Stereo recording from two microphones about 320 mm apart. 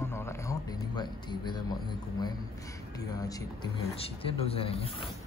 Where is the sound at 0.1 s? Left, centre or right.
Centre.